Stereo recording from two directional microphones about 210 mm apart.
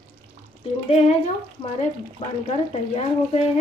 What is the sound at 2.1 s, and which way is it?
Speech, 30° left (ahead or behind).